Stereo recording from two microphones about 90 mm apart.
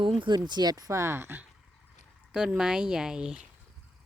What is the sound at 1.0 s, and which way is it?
Speech, 25° right (ahead or behind).